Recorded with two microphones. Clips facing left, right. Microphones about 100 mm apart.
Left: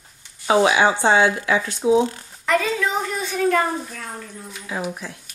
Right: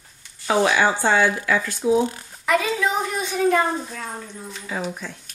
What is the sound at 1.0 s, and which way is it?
Speech, 20° left (ahead or behind).